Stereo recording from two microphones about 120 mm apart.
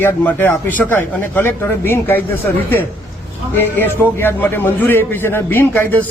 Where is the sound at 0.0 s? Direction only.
15° left (ahead or behind).